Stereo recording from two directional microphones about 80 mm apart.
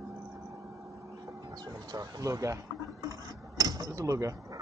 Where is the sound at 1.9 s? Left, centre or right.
Right.